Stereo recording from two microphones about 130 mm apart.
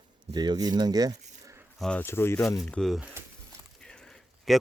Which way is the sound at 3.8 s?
5° left (ahead or behind).